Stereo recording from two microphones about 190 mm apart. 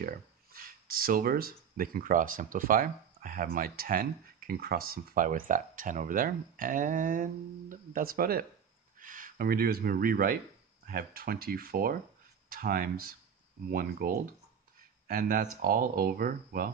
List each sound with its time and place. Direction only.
0.0 s speech: 50° right (ahead or behind)